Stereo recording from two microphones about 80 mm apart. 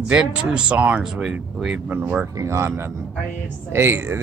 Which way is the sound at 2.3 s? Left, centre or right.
Right.